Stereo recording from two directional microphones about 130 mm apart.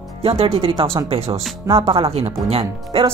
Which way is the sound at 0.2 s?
50° right (ahead or behind).